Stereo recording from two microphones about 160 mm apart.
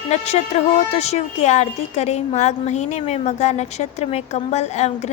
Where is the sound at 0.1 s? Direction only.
45° left (ahead or behind).